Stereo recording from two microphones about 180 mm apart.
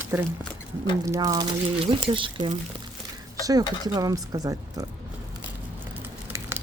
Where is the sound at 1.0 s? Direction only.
15° right (ahead or behind).